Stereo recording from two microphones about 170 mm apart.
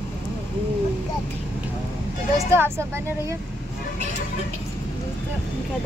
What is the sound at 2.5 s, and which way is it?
Speech, 15° right (ahead or behind).